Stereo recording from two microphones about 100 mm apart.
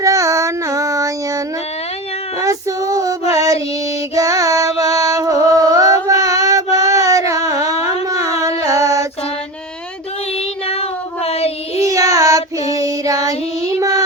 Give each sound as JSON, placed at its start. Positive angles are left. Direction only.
{"t": 0.0, "sound": "child singing", "side_deg": -35}
{"t": 2.4, "sound": "female singing", "side_deg": -35}
{"t": 3.3, "sound": "music", "side_deg": -35}
{"t": 10.7, "sound": "child singing", "side_deg": 90}
{"t": 11.8, "sound": "child singing", "side_deg": -35}